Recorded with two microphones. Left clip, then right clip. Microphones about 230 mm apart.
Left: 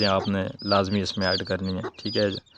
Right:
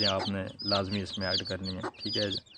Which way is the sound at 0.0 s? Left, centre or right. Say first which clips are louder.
Left 6 dB; left.